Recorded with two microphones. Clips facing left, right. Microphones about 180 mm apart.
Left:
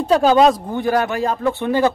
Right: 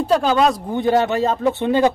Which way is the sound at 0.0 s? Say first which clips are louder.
Left 2 dB; centre (ahead or behind).